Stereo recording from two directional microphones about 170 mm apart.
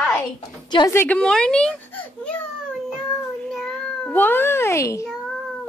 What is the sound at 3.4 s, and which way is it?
Cat, 5° left (ahead or behind).